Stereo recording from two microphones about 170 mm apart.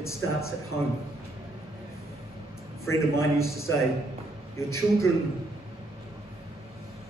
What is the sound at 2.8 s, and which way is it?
A man's voice, 15° left (ahead or behind).